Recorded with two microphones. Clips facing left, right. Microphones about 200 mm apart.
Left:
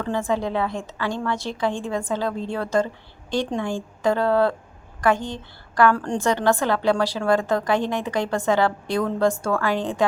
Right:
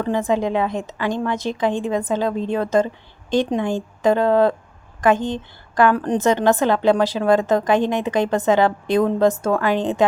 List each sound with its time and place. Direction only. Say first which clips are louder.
0.0 s a woman's voice: right 4 dB; 15° right (ahead or behind)